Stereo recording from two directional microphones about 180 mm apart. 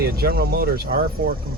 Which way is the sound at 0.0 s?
55° right (ahead or behind).